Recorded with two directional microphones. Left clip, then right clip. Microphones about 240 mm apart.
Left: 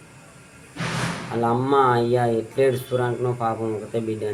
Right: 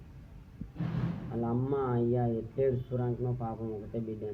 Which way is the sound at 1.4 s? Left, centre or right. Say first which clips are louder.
Left 14 dB; left.